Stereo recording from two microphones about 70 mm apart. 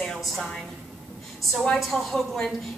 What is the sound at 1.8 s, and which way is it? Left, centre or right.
Speech, centre.